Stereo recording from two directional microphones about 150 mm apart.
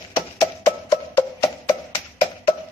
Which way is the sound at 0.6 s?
20° left (ahead or behind).